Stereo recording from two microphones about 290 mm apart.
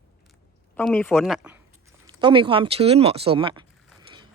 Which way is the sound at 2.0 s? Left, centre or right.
Centre.